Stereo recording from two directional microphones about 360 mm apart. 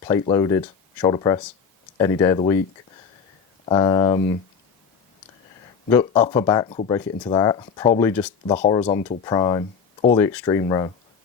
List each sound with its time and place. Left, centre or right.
0.0 s speech: centre
3.7 s speech: centre
5.9 s speech: centre